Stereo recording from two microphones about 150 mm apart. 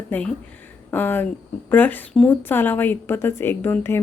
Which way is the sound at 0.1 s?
10° left (ahead or behind).